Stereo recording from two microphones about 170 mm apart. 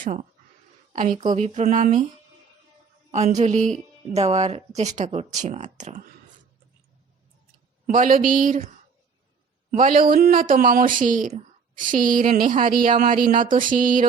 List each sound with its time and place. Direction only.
0.0 s speech: 45° right (ahead or behind)
3.1 s speech: 45° right (ahead or behind)
7.9 s speech: 50° right (ahead or behind)
9.7 s speech: 50° right (ahead or behind)